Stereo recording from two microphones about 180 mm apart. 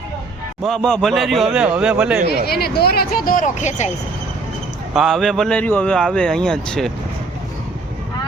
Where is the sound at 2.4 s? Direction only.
60° left (ahead or behind); by 3.9 s 40° left (ahead or behind).